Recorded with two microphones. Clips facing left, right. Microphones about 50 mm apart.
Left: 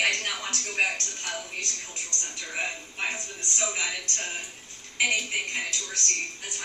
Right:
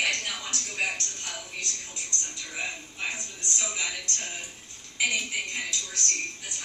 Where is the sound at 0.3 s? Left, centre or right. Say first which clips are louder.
Left 4 dB; left.